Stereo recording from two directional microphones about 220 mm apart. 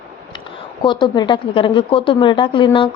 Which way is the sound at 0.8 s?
20° left (ahead or behind).